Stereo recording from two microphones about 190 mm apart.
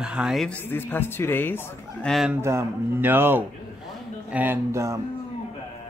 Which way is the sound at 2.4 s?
10° right (ahead or behind).